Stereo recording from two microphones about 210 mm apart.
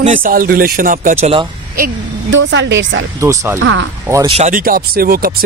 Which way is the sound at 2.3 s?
60° right (ahead or behind).